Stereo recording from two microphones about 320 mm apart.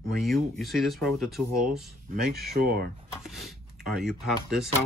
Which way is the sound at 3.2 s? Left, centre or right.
Centre.